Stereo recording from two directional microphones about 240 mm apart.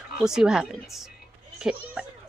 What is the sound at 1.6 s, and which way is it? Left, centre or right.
Speech, centre.